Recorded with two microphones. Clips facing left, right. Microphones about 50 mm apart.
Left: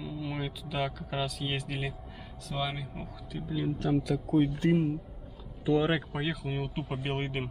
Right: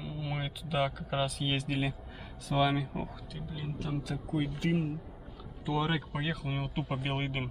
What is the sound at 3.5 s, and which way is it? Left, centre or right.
Speech, left.